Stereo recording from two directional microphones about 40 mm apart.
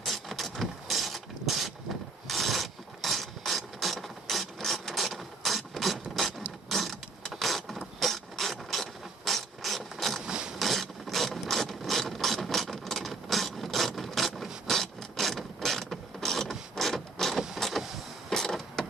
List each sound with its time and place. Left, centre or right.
0.0 s mechanisms: centre
2.2 s ratchet: centre
6.7 s vehicle: centre
10.2 s a sound: right
10.6 s ratchet: centre
16.7 s mechanisms: centre
17.3 s vehicle: centre
17.6 s vehicle: centre